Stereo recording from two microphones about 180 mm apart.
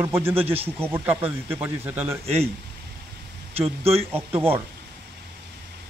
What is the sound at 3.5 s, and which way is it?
Speech, 35° right (ahead or behind).